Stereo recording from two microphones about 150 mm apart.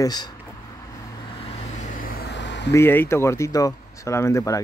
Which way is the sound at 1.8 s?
65° left (ahead or behind).